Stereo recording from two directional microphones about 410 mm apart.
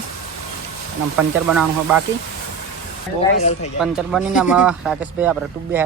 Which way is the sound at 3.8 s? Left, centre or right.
Centre.